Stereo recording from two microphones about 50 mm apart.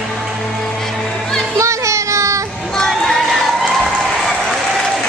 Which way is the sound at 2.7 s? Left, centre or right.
Centre.